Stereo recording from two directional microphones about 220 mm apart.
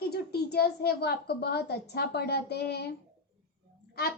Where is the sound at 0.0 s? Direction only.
45° left (ahead or behind).